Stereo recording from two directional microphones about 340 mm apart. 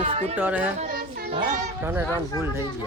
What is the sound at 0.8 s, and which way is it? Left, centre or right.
Child singing, right.